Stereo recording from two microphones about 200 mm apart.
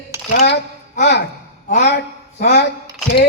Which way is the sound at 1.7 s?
55° left (ahead or behind).